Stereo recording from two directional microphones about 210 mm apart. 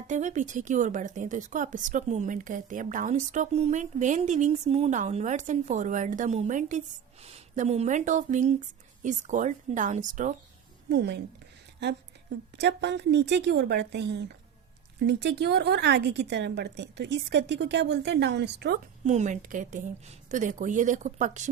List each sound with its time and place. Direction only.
0.1 s a woman's voice: 35° right (ahead or behind)
10.8 s a woman's voice: 55° right (ahead or behind)
19.0 s a woman's voice: 35° right (ahead or behind)